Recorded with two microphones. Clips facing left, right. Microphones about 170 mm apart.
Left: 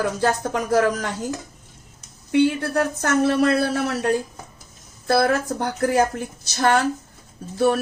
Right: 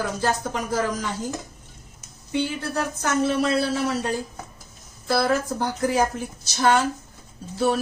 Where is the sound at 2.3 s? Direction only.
65° left (ahead or behind).